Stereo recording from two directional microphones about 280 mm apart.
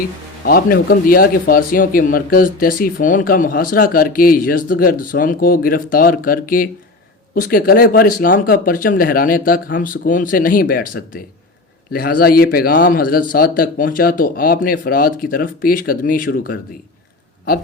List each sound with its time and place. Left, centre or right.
0.4 s speech: left